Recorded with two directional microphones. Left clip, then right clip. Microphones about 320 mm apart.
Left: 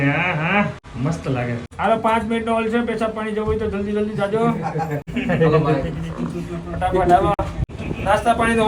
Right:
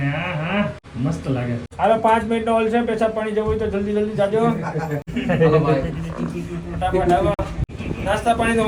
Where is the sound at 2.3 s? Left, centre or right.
Left.